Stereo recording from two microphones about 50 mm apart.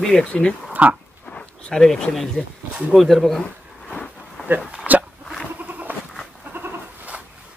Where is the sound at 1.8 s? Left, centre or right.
Centre.